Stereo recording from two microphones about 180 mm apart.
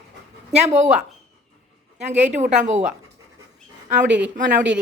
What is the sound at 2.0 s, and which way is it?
Speech, 40° right (ahead or behind).